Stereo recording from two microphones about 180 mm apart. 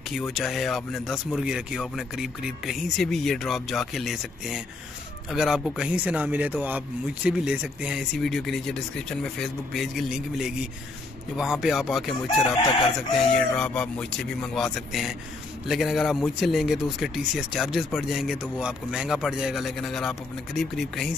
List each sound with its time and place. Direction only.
0.3 s speech: centre (ahead or behind)